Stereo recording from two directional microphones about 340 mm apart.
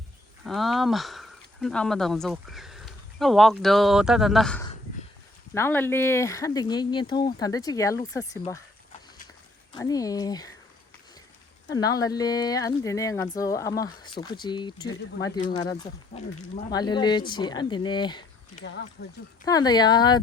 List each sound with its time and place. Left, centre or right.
0.4 s speech: centre
9.7 s speech: centre
11.7 s speech: centre
16.7 s speech: centre
18.6 s speech: left
19.5 s speech: centre